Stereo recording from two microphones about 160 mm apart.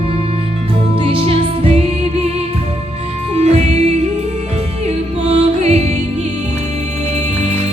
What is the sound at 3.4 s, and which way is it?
Music, 45° right (ahead or behind).